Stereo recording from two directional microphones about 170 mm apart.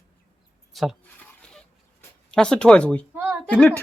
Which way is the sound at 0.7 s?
Centre (ahead or behind).